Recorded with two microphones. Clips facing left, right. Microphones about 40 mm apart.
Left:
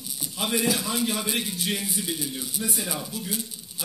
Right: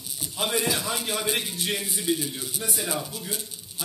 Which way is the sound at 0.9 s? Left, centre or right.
Right.